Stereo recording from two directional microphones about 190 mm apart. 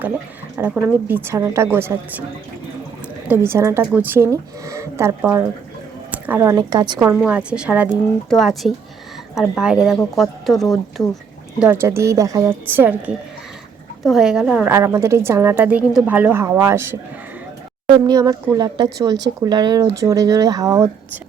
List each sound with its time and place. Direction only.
0.8 s a woman's voice: 10° right (ahead or behind)
3.2 s a woman's voice: 10° right (ahead or behind)
7.3 s a woman's voice: 5° right (ahead or behind)
11.6 s a woman's voice: 10° right (ahead or behind)
17.8 s a woman's voice: 25° right (ahead or behind)